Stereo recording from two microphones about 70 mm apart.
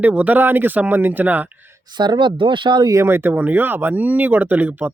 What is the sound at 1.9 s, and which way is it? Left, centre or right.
Speech, right.